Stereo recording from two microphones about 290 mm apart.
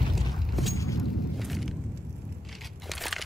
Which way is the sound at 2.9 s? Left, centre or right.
Centre.